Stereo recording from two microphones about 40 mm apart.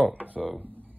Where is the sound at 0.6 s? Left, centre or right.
Right.